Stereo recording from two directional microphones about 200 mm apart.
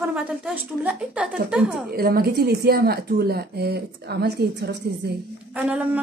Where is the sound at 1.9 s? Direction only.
50° right (ahead or behind).